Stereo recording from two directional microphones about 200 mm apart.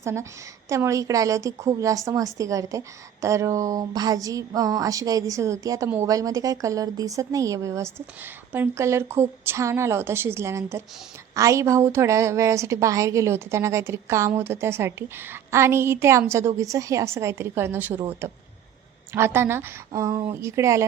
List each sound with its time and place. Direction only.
0.0 s a woman's voice: 15° right (ahead or behind)